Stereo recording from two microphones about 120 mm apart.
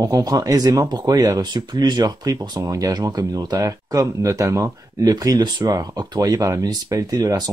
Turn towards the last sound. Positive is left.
turn(degrees=-30)  # may be behind; listen again after turning